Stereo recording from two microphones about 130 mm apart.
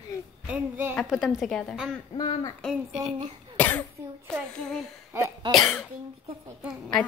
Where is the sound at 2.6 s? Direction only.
Centre (ahead or behind).